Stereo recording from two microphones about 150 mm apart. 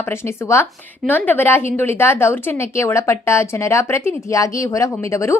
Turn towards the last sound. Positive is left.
turn(degrees=20)  # may be behind; listen again after turning